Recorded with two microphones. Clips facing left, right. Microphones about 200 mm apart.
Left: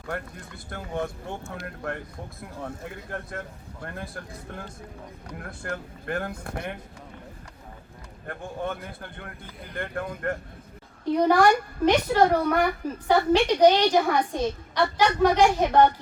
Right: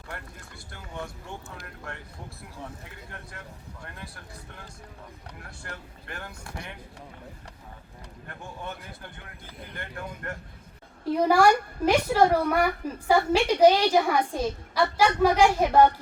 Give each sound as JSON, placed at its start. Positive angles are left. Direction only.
{"t": 0.7, "sound": "speech", "side_deg": 55}
{"t": 8.3, "sound": "speech", "side_deg": 55}
{"t": 11.1, "sound": "a woman's voice", "side_deg": -5}